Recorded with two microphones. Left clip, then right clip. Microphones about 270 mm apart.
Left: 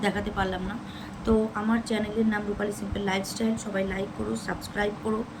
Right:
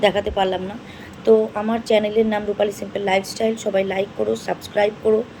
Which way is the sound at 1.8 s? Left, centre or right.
Centre.